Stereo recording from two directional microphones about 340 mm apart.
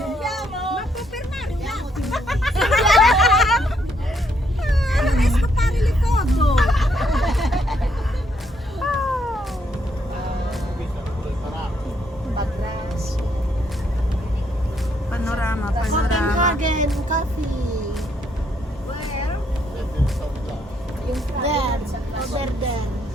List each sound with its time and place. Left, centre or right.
0.0 s child singing: centre
1.6 s a sound: centre
4.6 s cat: centre
8.8 s cat: centre
15.1 s vehicle: centre
16.4 s music: right
21.4 s vehicle: centre